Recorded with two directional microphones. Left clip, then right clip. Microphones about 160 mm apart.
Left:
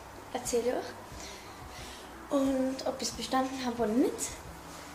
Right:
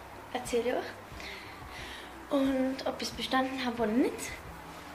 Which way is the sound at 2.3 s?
10° left (ahead or behind).